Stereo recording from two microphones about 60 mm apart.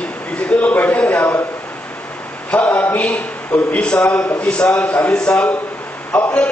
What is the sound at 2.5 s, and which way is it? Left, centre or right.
A man's voice, left.